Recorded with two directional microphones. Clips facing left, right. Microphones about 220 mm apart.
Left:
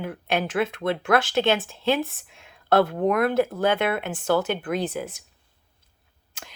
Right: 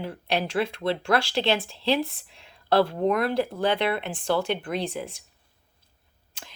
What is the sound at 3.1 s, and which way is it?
Speech, 50° left (ahead or behind).